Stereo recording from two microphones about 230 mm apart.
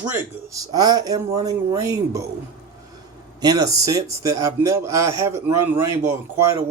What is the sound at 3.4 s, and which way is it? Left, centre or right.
A man's voice, centre.